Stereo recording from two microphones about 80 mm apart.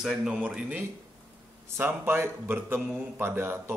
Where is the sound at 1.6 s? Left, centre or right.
Right.